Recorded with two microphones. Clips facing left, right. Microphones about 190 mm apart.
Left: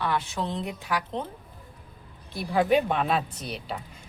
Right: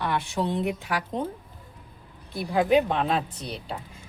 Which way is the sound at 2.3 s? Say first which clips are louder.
Right 1 dB; centre (ahead or behind).